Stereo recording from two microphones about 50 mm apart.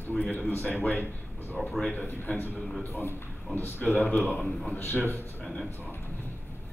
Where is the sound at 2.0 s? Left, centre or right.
Left.